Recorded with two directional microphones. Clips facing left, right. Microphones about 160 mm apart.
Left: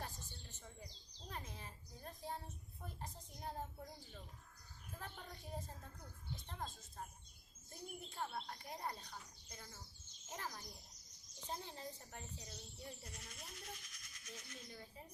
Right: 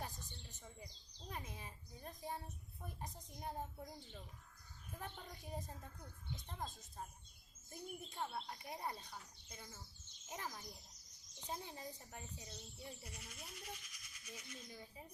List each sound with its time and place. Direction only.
0.0 s a sound: 15° right (ahead or behind)
2.8 s a woman's voice: 15° right (ahead or behind)
4.9 s speech: 15° right (ahead or behind)